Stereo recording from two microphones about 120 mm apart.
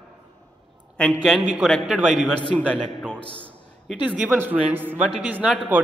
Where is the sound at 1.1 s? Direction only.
5° right (ahead or behind).